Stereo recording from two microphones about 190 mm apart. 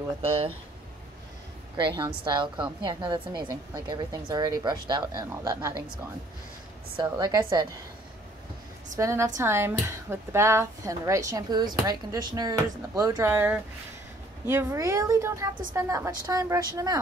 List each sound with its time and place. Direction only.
2.0 s a woman's voice: 25° right (ahead or behind)
7.0 s a woman's voice: 20° right (ahead or behind)
8.9 s a woman's voice: 15° right (ahead or behind)